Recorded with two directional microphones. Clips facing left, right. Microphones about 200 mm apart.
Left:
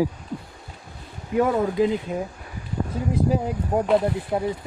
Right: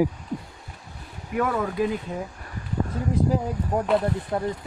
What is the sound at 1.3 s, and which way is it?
Speech, 25° left (ahead or behind).